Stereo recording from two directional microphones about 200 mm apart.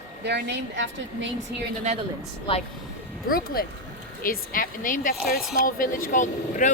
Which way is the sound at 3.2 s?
50° left (ahead or behind).